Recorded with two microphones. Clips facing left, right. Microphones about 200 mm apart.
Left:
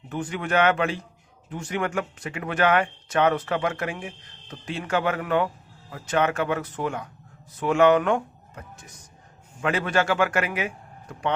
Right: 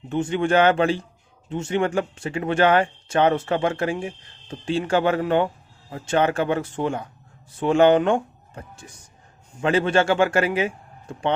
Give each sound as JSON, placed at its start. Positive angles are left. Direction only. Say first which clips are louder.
{"t": 0.1, "sound": "a man's voice", "louder": "right 6 dB", "side_deg": -25}